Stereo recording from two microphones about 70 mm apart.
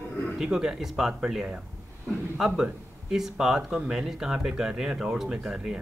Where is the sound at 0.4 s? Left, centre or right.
Centre.